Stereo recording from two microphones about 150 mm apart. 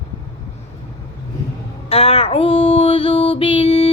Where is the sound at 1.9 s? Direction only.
40° left (ahead or behind).